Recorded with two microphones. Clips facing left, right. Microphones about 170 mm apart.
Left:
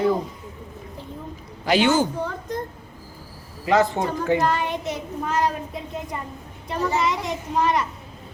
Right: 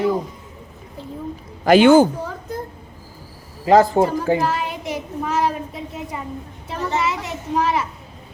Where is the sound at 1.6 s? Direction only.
55° right (ahead or behind).